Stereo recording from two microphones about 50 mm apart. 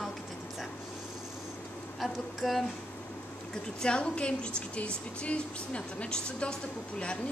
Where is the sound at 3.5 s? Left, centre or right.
Centre.